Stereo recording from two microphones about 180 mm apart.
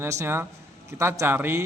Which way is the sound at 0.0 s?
15° right (ahead or behind).